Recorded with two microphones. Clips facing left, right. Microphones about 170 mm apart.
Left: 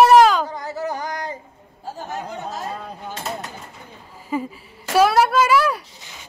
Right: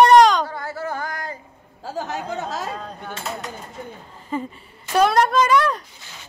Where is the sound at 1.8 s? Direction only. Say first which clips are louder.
Right 2 dB; 90° right.